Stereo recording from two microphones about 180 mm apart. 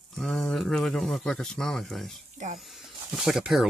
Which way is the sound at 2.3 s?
40° right (ahead or behind).